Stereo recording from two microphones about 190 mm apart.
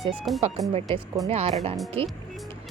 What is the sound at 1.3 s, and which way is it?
Speech, 35° right (ahead or behind).